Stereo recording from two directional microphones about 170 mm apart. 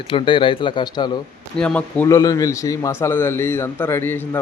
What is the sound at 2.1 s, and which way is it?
A man's voice, 20° left (ahead or behind).